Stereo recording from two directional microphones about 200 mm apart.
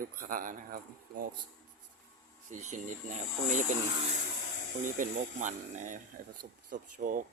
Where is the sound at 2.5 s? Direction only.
40° right (ahead or behind).